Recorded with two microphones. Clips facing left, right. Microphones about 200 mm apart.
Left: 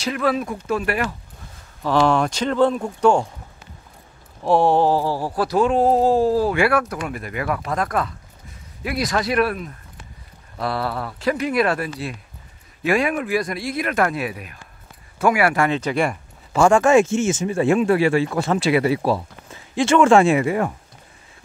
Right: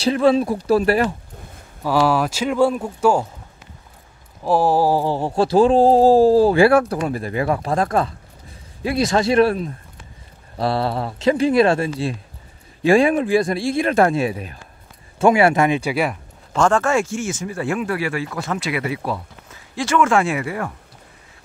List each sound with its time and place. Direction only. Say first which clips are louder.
0.0 s speech: right 6 dB; 30° right (ahead or behind)
1.8 s speech: even; 5° right (ahead or behind)
4.4 s a sound: even; centre (ahead or behind)
16.5 s speech: left 3 dB; 10° left (ahead or behind)